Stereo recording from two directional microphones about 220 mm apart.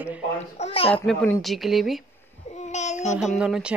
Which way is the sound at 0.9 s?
5° left (ahead or behind).